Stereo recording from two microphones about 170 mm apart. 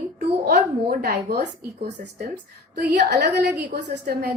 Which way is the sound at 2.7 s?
80° right.